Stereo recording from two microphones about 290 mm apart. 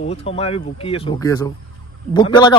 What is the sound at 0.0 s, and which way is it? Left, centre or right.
Speech, left.